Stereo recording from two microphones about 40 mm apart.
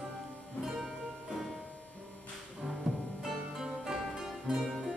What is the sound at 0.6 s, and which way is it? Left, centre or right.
Music, centre.